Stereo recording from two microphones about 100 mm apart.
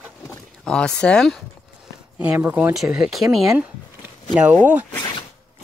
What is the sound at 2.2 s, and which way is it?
Speech, 15° right (ahead or behind).